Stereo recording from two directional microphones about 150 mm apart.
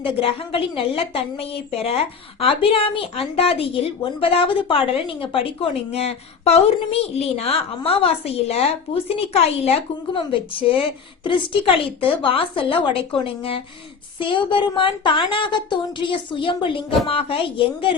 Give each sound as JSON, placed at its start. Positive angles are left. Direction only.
{"t": 0.0, "sound": "a woman's voice", "side_deg": 40}